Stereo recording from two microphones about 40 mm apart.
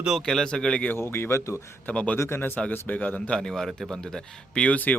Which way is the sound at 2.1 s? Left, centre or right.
Left.